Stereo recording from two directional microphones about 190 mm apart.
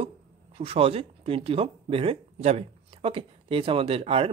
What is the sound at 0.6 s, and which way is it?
Speech, 30° right (ahead or behind).